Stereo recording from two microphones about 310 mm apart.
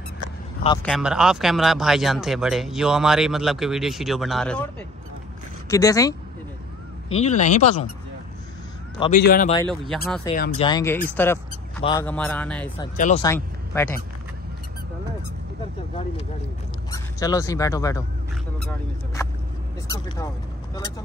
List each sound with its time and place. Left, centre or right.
0.8 s speech: centre
5.7 s speech: centre
7.1 s speech: left
9.2 s speech: left
9.6 s speech: centre
10.3 s speech: left; by 12.7 s centre
12.7 s speech: centre
13.2 s speech: centre
16.9 s speech: centre